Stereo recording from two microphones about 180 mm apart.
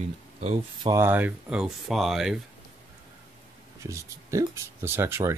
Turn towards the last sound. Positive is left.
turn(degrees=-15)  # may be behind; listen again after turning